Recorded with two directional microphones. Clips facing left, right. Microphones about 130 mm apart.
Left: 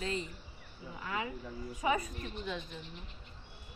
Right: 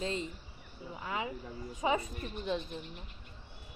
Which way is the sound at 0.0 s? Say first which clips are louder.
Right 1 dB; 25° right (ahead or behind).